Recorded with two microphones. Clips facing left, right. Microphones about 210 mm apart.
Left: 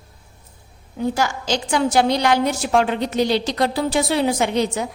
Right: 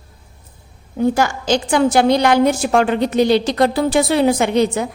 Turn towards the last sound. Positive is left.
turn(degrees=-55)  # may be behind; listen again after turning